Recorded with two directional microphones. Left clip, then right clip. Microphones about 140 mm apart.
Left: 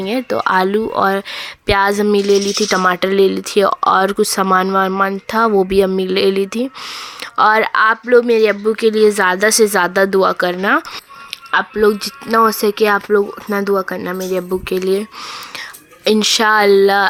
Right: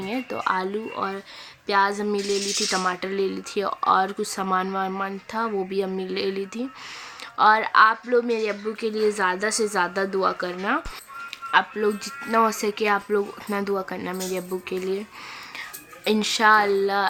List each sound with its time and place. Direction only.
0.0 s speech: 50° left (ahead or behind)
11.5 s speech: 50° left (ahead or behind)
16.0 s speech: 40° left (ahead or behind); by 17.1 s 65° left (ahead or behind)